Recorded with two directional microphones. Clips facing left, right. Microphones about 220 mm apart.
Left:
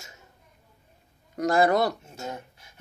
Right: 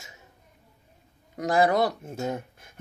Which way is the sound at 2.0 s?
55° right (ahead or behind).